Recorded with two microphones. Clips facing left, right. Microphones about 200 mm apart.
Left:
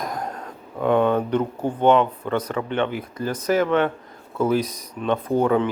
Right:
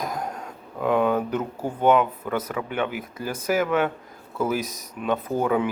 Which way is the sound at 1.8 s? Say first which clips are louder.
Left 2 dB; 5° right (ahead or behind).